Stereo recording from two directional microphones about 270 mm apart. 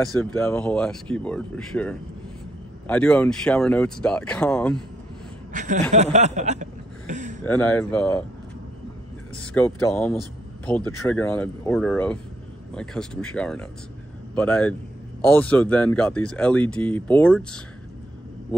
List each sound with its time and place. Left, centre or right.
0.2 s speech: centre
5.5 s speech: right
6.1 s a sound: right
7.4 s speech: centre
9.4 s speech: centre